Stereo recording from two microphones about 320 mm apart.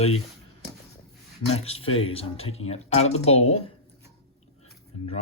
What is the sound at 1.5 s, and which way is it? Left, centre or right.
Speech, centre.